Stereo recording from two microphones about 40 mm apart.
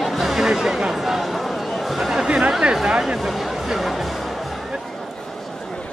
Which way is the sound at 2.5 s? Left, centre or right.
Right.